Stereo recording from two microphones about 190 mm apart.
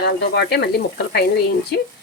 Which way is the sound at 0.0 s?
60° left (ahead or behind).